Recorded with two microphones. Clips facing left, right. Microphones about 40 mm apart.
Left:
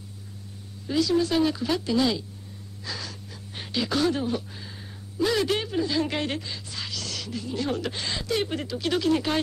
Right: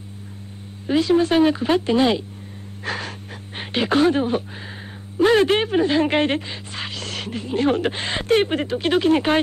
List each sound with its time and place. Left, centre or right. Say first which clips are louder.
0.8 s speech: right 6 dB; right
2.8 s gasp: right 8 dB; right
5.1 s speech: right 8 dB; right